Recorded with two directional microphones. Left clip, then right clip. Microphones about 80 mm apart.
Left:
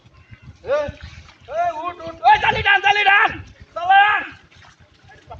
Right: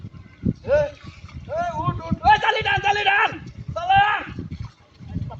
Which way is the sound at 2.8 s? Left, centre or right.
Right.